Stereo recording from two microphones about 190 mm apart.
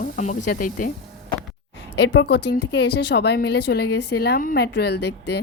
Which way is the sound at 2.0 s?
70° left (ahead or behind).